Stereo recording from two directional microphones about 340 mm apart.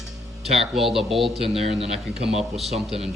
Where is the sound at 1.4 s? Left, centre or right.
Centre.